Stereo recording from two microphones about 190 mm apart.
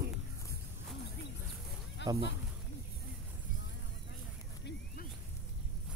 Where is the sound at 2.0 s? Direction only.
70° left (ahead or behind).